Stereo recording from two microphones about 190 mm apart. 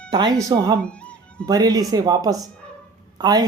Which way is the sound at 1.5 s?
20° right (ahead or behind).